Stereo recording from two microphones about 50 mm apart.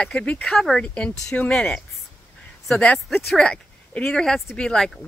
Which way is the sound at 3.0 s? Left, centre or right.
Centre.